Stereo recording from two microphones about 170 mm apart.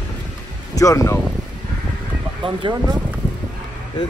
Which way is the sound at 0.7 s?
20° left (ahead or behind).